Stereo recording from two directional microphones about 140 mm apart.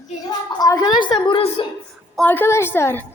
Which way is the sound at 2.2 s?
15° left (ahead or behind).